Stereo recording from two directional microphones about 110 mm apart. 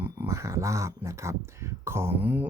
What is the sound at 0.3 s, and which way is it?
Speech, 25° right (ahead or behind).